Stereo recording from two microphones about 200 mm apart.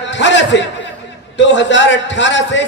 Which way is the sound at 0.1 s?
65° left (ahead or behind).